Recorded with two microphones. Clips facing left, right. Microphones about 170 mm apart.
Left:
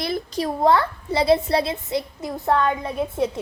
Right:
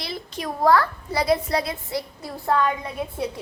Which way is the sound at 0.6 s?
25° left (ahead or behind).